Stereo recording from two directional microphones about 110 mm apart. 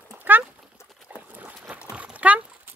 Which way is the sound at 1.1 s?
15° right (ahead or behind).